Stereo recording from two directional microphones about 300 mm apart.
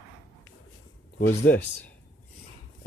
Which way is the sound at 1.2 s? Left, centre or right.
Left.